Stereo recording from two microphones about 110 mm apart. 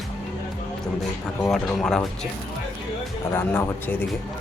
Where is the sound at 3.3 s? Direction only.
20° left (ahead or behind).